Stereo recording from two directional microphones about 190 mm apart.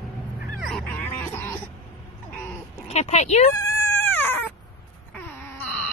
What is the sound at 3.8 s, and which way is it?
Dog, 10° left (ahead or behind).